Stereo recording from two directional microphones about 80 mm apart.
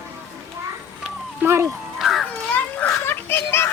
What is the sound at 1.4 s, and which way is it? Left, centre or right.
Speech, right.